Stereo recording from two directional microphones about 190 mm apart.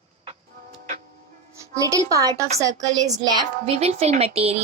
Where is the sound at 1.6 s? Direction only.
15° right (ahead or behind).